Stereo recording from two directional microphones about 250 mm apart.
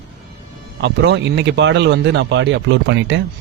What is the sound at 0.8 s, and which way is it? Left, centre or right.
Speech, right.